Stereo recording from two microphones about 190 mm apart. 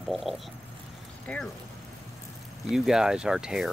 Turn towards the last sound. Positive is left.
turn(degrees=-5)  # may be behind; listen again after turning